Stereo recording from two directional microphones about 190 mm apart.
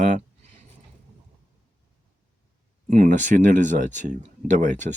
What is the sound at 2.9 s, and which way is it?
Speech, 40° right (ahead or behind).